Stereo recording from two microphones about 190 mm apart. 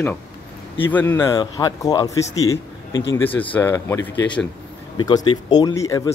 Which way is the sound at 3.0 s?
80° left.